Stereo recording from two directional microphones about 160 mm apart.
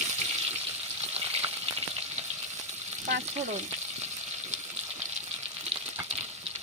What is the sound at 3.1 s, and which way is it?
Frying, 45° right (ahead or behind).